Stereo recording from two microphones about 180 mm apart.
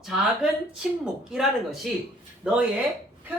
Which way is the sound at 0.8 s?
5° right (ahead or behind).